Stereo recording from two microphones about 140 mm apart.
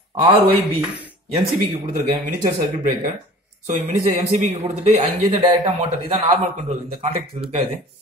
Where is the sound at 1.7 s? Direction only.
50° right (ahead or behind).